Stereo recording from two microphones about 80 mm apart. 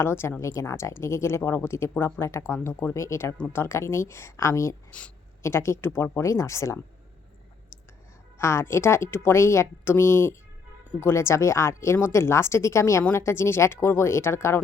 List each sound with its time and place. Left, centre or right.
0.0 s speech: left
4.9 s speech: centre
5.4 s speech: left
8.4 s speech: left